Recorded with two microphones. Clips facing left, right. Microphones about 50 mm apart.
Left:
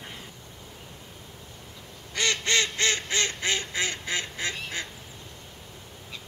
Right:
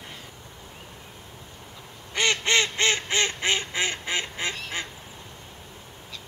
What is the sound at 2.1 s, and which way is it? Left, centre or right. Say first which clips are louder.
Duck: right 3 dB; right.